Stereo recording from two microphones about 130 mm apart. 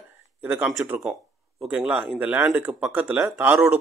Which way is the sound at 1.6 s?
10° right (ahead or behind).